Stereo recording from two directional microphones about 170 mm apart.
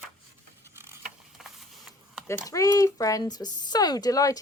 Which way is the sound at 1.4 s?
Centre (ahead or behind).